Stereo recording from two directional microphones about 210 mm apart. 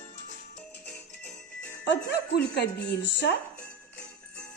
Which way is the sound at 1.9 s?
55° left (ahead or behind).